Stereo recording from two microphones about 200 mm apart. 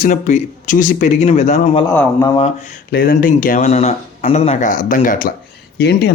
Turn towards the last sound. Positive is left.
turn(degrees=55)  # may be behind; listen again after turning